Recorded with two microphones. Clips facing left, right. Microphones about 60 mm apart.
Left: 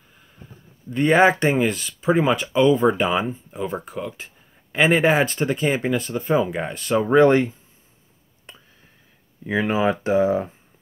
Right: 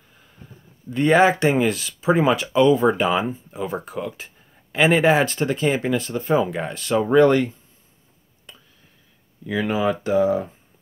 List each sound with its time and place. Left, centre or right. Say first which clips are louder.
0.8 s speech: even; centre
7.1 s speech: even; left
8.5 s a sound: left 1 dB; left
9.4 s speech: left 1 dB; left